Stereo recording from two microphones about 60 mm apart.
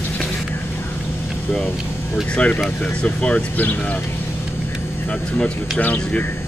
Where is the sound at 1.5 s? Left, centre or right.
Centre.